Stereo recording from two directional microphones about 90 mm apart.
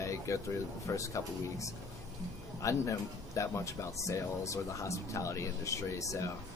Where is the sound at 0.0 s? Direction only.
35° left (ahead or behind).